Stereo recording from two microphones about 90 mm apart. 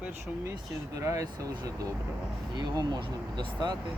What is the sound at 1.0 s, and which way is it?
Speech, 35° right (ahead or behind).